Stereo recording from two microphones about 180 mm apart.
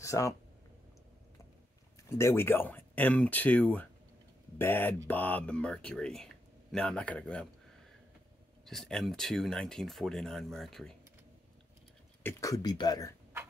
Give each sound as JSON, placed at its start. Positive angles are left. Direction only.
{"t": 0.0, "sound": "speech", "side_deg": 15}
{"t": 2.0, "sound": "speech", "side_deg": 15}
{"t": 8.6, "sound": "speech", "side_deg": 0}
{"t": 12.2, "sound": "speech", "side_deg": 15}